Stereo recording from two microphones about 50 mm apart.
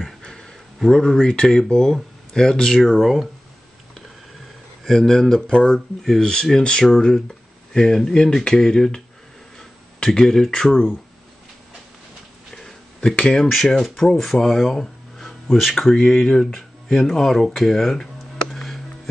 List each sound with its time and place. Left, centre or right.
0.2 s a sound: centre
0.9 s speech: centre
2.8 s speech: centre
4.8 s speech: centre
5.5 s speech: centre
13.1 s speech: left
13.4 s speech: centre
18.5 s music: centre